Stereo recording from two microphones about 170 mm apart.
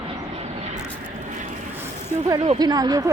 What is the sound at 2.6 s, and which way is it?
Speech, 25° right (ahead or behind).